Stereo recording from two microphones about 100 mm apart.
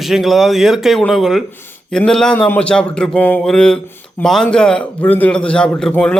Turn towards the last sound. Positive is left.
turn(degrees=10)  # may be behind; listen again after turning